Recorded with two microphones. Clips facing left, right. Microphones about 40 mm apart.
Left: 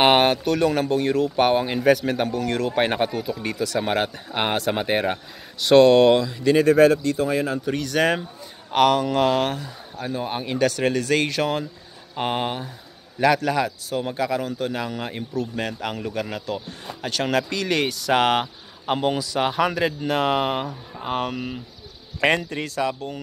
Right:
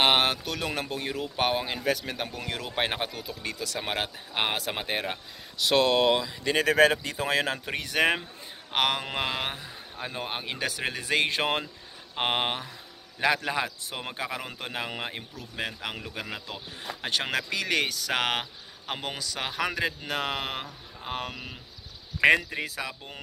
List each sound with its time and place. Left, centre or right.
0.0 s speech: centre
2.2 s speech: centre
4.8 s speech: centre
5.6 s speech: centre
7.2 s speech: right
7.6 s speech: right
13.5 s speech: centre
13.8 s speech: right
15.5 s speech: centre
17.3 s speech: centre